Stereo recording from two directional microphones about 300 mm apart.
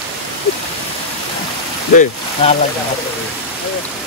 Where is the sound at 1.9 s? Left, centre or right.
Left.